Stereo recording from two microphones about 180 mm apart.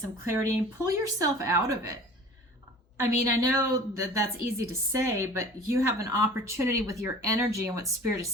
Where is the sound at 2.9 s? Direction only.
15° right (ahead or behind).